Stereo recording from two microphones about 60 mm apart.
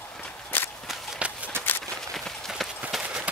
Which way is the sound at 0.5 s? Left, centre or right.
Left.